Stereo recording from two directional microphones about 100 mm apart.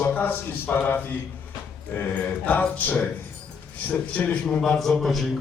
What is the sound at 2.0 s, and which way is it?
Mantra, 15° left (ahead or behind).